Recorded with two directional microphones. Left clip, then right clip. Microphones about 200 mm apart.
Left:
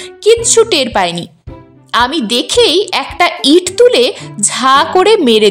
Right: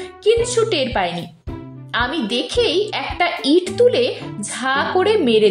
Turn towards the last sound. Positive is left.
turn(degrees=35)  # may be behind; listen again after turning